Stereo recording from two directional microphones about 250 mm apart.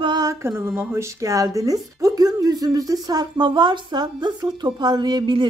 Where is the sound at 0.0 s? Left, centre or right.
Centre.